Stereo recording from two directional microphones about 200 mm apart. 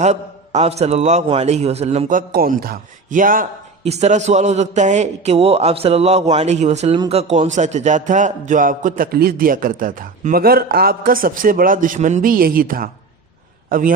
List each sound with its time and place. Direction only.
0.0 s a man's voice: 35° right (ahead or behind)